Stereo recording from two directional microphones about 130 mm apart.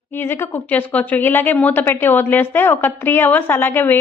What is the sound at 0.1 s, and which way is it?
Speech, 15° left (ahead or behind).